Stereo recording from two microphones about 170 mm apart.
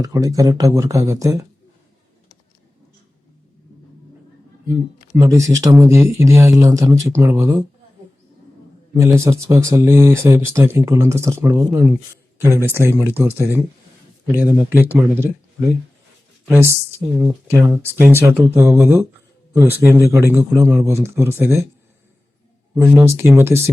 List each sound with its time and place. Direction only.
0.0 s speech: 20° right (ahead or behind)
5.1 s speech: 15° right (ahead or behind)
9.0 s speech: 15° right (ahead or behind)
16.5 s speech: 15° right (ahead or behind)
22.7 s speech: 15° right (ahead or behind)